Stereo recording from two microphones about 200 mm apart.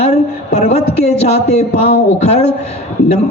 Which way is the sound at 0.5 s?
35° left (ahead or behind).